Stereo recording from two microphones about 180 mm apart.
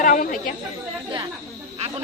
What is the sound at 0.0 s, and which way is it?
Chatter, 50° left (ahead or behind).